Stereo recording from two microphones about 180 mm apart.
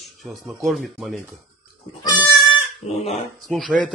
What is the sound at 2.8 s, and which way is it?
Speech, 35° left (ahead or behind).